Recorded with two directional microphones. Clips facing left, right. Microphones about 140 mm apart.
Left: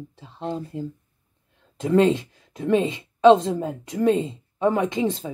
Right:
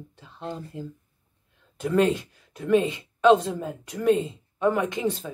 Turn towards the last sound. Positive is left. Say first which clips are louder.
# left 3 dB
turn(degrees=25)  # may be behind; listen again after turning